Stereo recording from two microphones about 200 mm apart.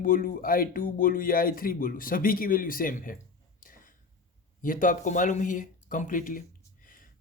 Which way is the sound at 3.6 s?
45° left (ahead or behind).